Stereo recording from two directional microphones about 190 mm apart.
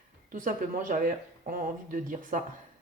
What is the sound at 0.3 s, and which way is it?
Speech, 45° right (ahead or behind).